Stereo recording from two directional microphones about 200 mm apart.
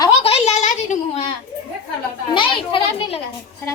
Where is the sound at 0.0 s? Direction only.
30° left (ahead or behind).